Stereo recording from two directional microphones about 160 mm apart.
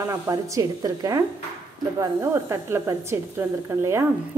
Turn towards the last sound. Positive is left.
turn(degrees=-15)  # may be behind; listen again after turning